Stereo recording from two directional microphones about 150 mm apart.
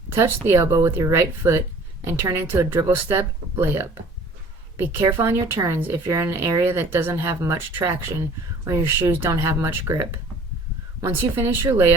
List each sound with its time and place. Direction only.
0.1 s speech: 15° right (ahead or behind)